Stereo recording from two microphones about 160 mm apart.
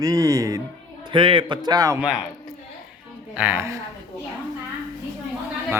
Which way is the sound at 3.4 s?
10° right (ahead or behind).